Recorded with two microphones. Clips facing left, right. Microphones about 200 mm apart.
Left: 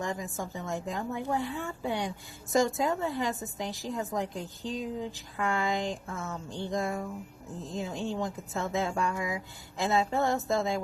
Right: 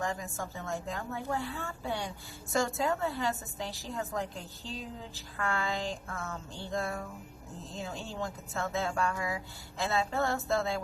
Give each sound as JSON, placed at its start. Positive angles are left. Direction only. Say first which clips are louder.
{"t": 0.0, "sound": "a woman's voice", "louder": "left 1 dB", "side_deg": 20}